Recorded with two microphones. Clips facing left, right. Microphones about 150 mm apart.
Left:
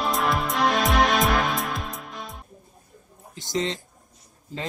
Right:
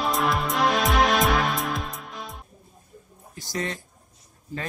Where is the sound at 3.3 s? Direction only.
20° left (ahead or behind).